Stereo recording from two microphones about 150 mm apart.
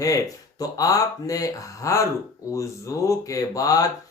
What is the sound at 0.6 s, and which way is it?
Speech, 25° left (ahead or behind).